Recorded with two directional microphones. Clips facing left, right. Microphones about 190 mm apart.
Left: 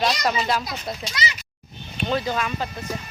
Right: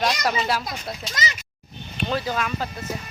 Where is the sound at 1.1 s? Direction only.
45° right (ahead or behind).